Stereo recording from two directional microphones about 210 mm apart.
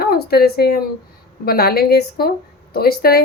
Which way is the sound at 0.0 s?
45° left (ahead or behind).